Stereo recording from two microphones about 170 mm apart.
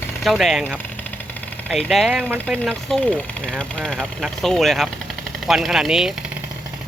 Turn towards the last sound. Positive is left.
turn(degrees=-5)  # may be behind; listen again after turning